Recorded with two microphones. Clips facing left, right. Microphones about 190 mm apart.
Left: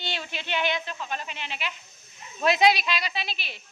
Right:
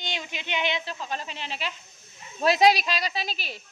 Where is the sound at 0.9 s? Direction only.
35° right (ahead or behind).